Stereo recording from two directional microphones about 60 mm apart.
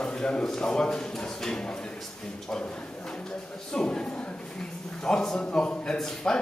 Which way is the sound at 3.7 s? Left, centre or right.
Centre.